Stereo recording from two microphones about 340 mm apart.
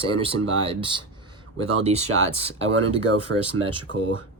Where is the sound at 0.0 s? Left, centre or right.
Centre.